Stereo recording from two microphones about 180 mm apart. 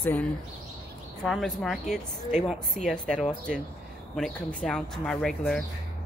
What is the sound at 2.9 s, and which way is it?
Speech, centre (ahead or behind).